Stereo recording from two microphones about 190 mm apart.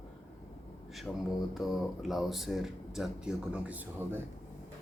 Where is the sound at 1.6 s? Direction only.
Centre (ahead or behind).